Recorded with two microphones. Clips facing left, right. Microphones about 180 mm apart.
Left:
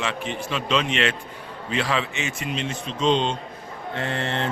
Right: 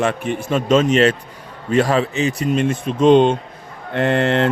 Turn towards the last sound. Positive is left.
turn(degrees=-65)  # may be behind; listen again after turning